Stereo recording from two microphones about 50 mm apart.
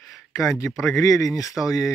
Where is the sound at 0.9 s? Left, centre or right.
Left.